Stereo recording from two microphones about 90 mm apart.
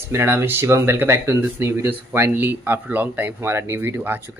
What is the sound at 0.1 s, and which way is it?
Speech, 25° right (ahead or behind).